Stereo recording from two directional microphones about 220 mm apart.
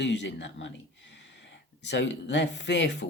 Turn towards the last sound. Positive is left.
turn(degrees=50)  # may be behind; listen again after turning